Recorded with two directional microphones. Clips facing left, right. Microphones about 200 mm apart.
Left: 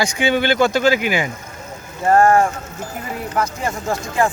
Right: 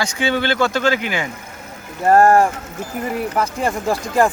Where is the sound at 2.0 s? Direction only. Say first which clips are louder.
Right 1 dB; 35° right (ahead or behind).